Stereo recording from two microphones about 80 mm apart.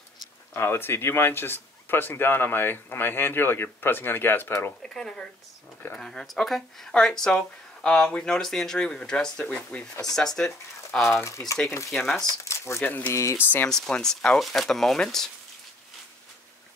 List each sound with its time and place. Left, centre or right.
0.5 s speech: left
4.8 s speech: centre
11.2 s speech: left
11.9 s speech: centre
12.4 s speech: left
12.8 s speech: left
13.1 s speech: left
13.7 s speech: centre